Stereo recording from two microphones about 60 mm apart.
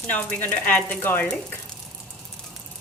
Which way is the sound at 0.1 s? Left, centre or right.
Left.